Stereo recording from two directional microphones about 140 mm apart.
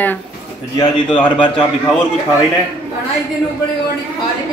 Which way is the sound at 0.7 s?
35° left (ahead or behind).